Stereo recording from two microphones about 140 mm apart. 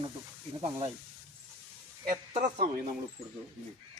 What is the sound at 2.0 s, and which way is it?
Speech, 70° right (ahead or behind).